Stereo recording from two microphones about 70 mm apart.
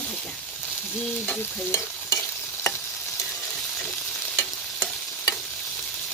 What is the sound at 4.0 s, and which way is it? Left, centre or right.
Stir, centre.